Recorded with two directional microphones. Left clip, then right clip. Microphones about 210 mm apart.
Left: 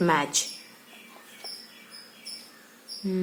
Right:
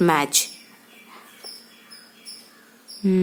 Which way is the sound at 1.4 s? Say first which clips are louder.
Even; 15° left (ahead or behind).